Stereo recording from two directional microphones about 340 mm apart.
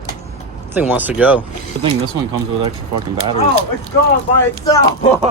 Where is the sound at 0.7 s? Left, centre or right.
Centre.